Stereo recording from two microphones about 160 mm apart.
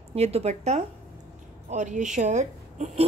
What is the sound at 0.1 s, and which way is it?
A woman's voice, 40° right (ahead or behind).